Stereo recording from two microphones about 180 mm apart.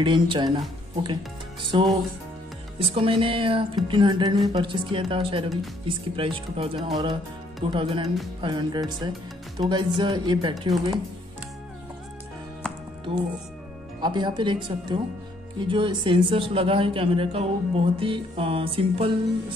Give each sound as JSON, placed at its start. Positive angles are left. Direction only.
{"t": 0.0, "sound": "a man's voice", "side_deg": -25}
{"t": 14.0, "sound": "a man's voice", "side_deg": -25}